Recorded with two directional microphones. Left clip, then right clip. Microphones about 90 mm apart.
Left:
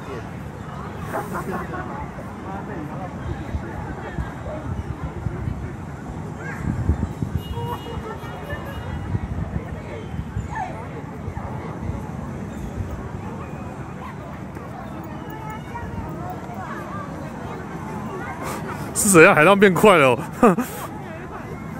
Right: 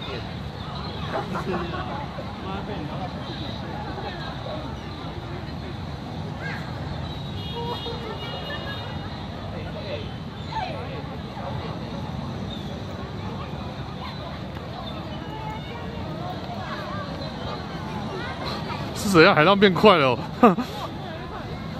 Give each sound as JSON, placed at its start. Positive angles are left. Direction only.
{"t": 1.1, "sound": "speech", "side_deg": 30}
{"t": 19.0, "sound": "speech", "side_deg": 35}